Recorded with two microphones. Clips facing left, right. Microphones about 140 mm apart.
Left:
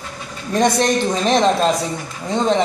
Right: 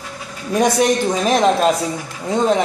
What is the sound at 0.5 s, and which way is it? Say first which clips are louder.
Speech: right 1 dB; 10° right (ahead or behind).